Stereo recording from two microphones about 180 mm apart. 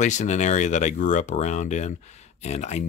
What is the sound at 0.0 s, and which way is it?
Speech, 40° left (ahead or behind).